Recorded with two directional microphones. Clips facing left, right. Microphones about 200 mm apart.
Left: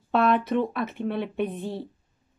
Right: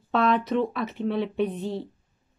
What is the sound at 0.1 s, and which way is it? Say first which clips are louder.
Speech: left 1 dB; 5° left (ahead or behind).